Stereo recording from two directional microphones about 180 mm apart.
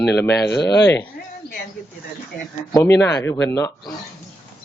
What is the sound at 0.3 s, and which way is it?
Speech, 70° left (ahead or behind).